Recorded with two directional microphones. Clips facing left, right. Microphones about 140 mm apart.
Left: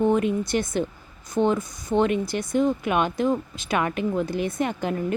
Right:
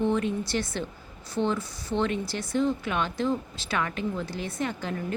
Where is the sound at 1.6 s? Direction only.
20° left (ahead or behind).